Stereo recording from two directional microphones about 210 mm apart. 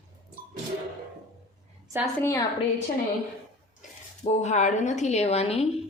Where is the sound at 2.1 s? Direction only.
15° left (ahead or behind).